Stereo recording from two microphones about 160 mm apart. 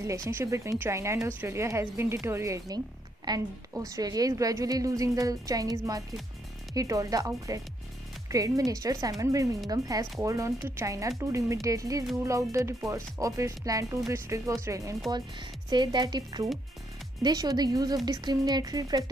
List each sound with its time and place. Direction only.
0.0 s speech: 20° right (ahead or behind)